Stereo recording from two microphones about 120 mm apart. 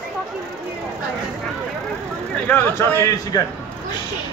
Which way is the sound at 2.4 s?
15° left (ahead or behind).